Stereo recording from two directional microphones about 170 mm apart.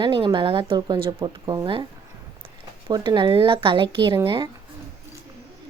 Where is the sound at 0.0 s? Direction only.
30° right (ahead or behind).